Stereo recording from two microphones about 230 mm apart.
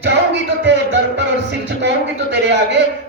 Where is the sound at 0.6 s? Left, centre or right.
Right.